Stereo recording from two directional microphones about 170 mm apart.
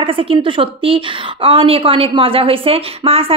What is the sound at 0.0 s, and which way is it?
A woman's voice, 30° right (ahead or behind).